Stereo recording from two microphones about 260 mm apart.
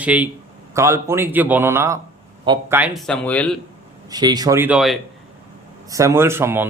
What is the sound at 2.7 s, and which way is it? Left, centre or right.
Speech, centre.